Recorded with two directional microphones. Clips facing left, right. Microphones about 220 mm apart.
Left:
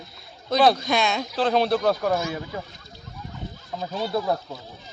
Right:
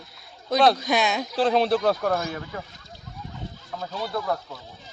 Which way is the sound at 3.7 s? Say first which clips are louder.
Left 4 dB; 25° left (ahead or behind).